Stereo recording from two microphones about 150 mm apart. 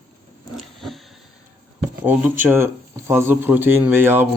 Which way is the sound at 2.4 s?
15° right (ahead or behind).